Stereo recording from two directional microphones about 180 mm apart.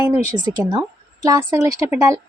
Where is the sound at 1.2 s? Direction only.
20° right (ahead or behind).